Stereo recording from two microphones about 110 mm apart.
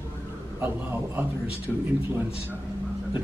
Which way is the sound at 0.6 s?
20° right (ahead or behind).